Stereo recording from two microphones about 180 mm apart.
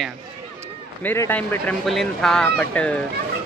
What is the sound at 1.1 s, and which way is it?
Speech, 10° left (ahead or behind).